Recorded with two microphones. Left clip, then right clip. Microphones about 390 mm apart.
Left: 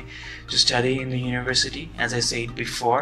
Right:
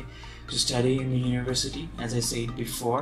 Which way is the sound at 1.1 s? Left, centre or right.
Centre.